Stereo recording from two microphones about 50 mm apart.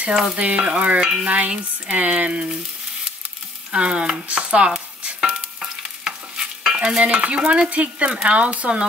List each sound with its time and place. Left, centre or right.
0.0 s frying: centre
0.4 s speech: right
3.7 s speech: right
5.0 s stir: centre
7.7 s speech: right